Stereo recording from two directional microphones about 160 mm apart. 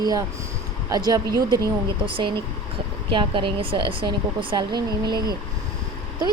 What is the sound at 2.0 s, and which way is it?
Speech, 30° right (ahead or behind).